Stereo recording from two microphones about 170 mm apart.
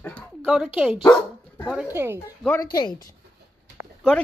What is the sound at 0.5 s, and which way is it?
Speech, 5° right (ahead or behind).